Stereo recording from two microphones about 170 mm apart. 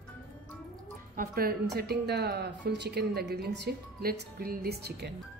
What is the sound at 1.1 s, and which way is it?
A woman's voice, 60° right (ahead or behind).